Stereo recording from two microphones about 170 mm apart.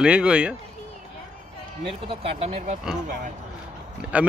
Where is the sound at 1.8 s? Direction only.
35° right (ahead or behind).